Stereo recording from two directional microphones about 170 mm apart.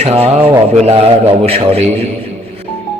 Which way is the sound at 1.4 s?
35° right (ahead or behind).